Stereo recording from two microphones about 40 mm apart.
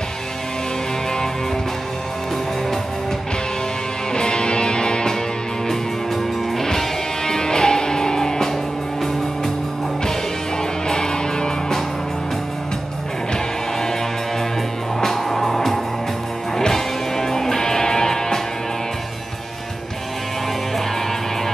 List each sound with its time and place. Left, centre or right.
4.1 s music: left
5.7 s music: centre
10.9 s music: centre
13.3 s music: centre
15.0 s music: centre